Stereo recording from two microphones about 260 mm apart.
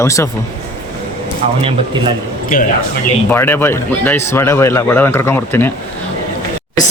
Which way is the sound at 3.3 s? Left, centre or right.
Centre.